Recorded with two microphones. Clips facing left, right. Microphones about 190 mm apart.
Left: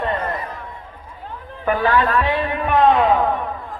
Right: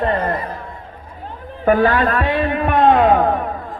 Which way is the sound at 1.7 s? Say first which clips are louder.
Right 4 dB; 45° right (ahead or behind).